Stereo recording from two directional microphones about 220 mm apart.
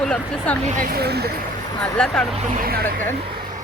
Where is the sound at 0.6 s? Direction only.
35° right (ahead or behind).